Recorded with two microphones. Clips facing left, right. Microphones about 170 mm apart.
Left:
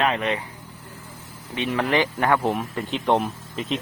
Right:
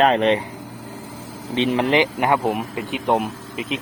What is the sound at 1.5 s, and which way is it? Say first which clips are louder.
Speech: right 4 dB; 20° right (ahead or behind).